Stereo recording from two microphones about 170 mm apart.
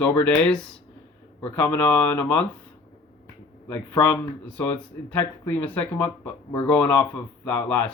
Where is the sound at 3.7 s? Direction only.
15° left (ahead or behind).